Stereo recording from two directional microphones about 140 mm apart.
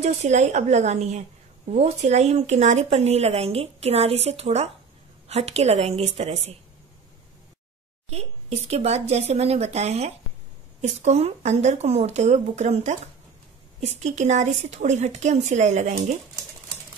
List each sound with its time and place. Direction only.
0.0 s speech: 55° right (ahead or behind)
8.1 s speech: 50° right (ahead or behind)